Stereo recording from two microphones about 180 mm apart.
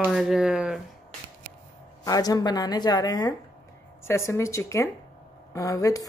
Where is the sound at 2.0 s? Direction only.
20° left (ahead or behind).